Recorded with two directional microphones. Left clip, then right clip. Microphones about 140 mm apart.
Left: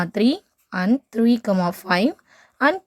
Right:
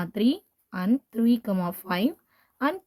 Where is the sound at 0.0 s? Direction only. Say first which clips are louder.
Left 6 dB; 35° left (ahead or behind).